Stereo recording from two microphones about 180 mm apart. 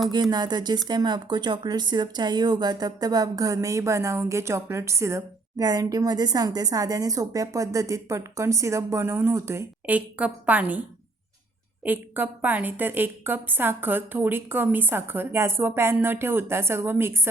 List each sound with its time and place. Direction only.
0.1 s speech: 25° right (ahead or behind)
11.9 s a woman's voice: 10° right (ahead or behind)